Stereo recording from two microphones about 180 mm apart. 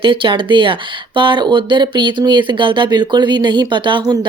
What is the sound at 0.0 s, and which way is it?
Speech, 30° right (ahead or behind).